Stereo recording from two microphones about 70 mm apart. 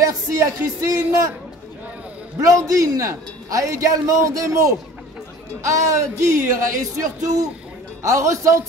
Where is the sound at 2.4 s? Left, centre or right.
Right.